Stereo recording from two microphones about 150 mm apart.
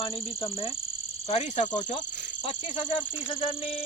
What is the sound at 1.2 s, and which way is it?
Cricket, 50° left (ahead or behind).